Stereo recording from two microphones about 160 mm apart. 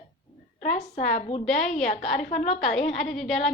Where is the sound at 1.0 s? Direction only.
60° left (ahead or behind).